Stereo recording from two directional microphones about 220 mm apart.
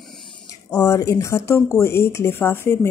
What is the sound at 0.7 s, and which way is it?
Speech, 10° left (ahead or behind).